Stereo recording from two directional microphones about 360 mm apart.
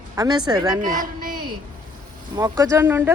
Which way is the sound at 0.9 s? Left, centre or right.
Right.